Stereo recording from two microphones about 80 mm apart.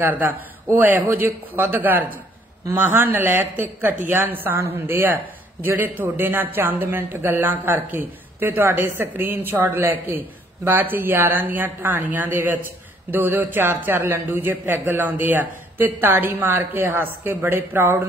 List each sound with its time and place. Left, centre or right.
0.0 s speech: right